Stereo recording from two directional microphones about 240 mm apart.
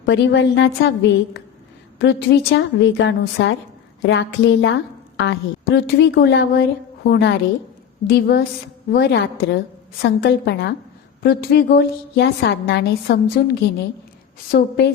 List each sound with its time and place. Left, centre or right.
0.0 s a woman's voice: left